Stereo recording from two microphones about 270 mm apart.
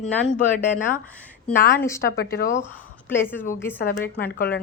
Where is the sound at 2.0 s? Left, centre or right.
Left.